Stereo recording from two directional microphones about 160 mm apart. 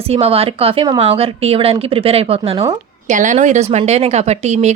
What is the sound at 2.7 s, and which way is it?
A woman's voice, 50° right (ahead or behind).